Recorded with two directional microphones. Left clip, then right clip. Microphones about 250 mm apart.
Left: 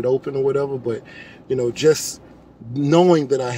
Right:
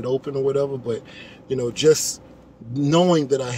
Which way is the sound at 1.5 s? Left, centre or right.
Centre.